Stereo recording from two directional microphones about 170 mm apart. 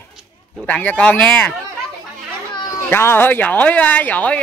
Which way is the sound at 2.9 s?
10° left (ahead or behind).